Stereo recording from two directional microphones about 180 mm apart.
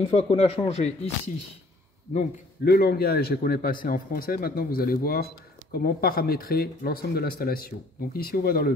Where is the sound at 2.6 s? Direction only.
60° left (ahead or behind).